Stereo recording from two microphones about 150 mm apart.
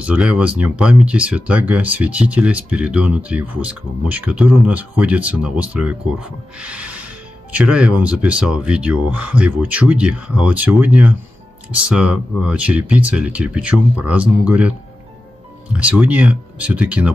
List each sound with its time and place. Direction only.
0.0 s speech: 10° right (ahead or behind)
15.7 s speech: 10° right (ahead or behind)